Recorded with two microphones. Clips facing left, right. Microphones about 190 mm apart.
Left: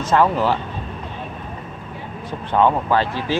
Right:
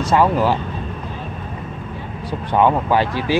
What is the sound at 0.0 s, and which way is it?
Speech, 10° right (ahead or behind).